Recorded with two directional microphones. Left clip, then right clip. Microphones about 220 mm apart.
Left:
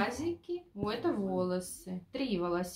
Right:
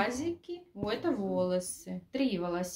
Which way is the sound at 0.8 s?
25° right (ahead or behind).